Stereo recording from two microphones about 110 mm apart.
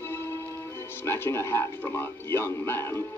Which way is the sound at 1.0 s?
25° left (ahead or behind).